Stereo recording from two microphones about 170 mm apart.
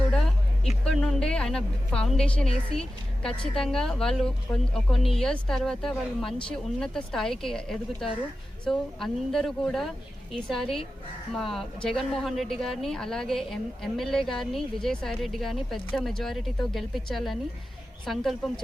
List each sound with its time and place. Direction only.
0.6 s a woman's voice: 5° left (ahead or behind)
2.7 s a woman's voice: 35° left (ahead or behind)
3.2 s a woman's voice: 5° left (ahead or behind)